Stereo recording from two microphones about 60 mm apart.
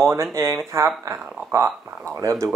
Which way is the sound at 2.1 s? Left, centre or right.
Right.